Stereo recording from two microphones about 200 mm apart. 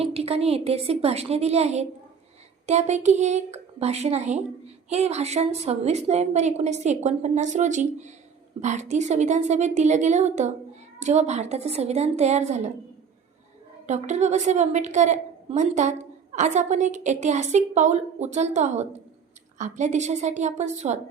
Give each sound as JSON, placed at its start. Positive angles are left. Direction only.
{"t": 0.0, "sound": "a woman's voice", "side_deg": -30}
{"t": 13.8, "sound": "a woman's voice", "side_deg": -35}